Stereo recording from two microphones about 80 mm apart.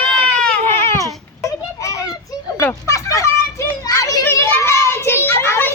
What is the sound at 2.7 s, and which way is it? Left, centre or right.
A child's voice, left.